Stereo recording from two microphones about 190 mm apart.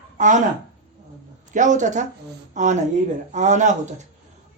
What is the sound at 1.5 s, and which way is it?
A woman's voice, 40° right (ahead or behind).